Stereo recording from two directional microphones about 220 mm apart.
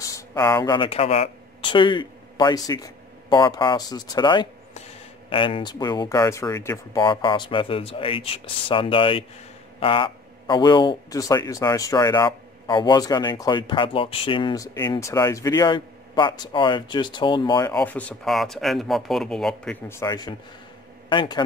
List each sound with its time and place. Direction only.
0.0 s a man's voice: 15° left (ahead or behind)
17.7 s a man's voice: 5° left (ahead or behind)